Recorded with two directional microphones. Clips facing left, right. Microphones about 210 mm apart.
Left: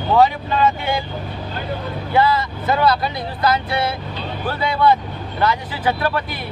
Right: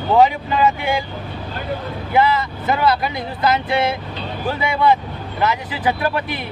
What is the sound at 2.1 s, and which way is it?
Speech, 15° right (ahead or behind).